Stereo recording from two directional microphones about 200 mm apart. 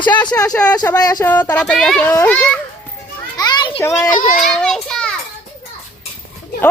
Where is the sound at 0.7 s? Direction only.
20° left (ahead or behind).